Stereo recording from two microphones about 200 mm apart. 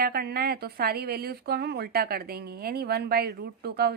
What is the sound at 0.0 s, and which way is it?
A woman's voice, 50° right (ahead or behind).